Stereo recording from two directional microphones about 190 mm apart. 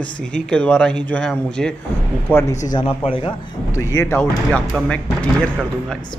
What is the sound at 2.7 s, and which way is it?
Speech, 30° left (ahead or behind).